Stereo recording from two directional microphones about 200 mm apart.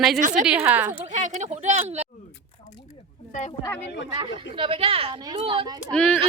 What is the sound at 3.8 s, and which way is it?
Speech, 55° left (ahead or behind).